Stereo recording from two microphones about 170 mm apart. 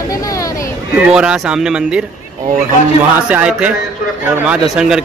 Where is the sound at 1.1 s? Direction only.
5° right (ahead or behind).